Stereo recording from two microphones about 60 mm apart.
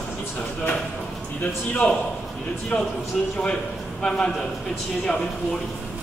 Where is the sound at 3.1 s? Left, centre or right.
Centre.